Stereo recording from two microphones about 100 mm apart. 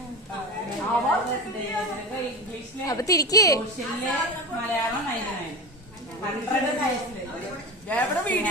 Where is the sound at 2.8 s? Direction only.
35° left (ahead or behind).